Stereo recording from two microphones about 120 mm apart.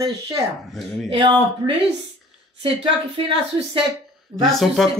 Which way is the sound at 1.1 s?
45° right (ahead or behind).